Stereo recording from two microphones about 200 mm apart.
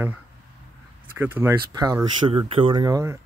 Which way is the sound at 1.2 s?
10° right (ahead or behind).